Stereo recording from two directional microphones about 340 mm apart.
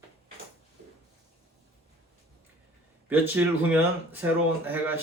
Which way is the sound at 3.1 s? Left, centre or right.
Centre.